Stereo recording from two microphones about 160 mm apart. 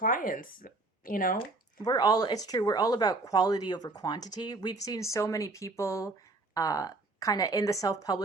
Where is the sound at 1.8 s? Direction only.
25° left (ahead or behind).